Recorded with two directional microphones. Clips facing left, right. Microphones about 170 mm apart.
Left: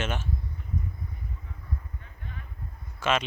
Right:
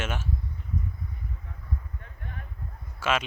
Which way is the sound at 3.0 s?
5° right (ahead or behind).